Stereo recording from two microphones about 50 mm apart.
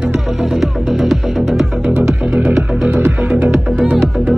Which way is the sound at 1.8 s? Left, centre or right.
Right.